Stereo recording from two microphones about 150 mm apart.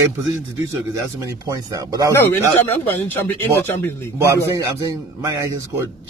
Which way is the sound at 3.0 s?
10° left (ahead or behind).